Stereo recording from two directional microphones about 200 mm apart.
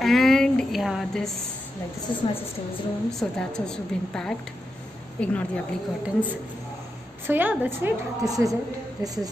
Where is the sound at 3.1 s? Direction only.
5° left (ahead or behind).